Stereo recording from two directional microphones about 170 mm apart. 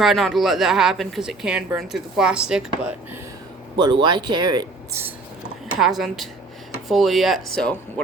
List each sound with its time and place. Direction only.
0.0 s speech: centre (ahead or behind)
4.0 s speech: 25° right (ahead or behind)
5.8 s speech: centre (ahead or behind)